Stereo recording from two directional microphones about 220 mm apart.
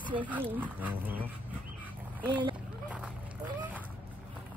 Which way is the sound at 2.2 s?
20° right (ahead or behind).